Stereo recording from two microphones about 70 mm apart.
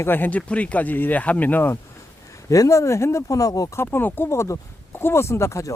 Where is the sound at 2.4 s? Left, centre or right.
Left.